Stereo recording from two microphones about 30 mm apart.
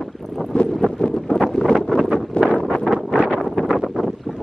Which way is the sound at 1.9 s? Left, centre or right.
Left.